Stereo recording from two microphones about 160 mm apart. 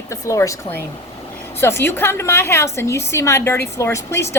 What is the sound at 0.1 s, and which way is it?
A woman's voice, 20° left (ahead or behind).